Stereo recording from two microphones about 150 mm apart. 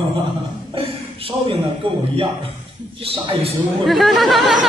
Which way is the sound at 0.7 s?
40° right (ahead or behind).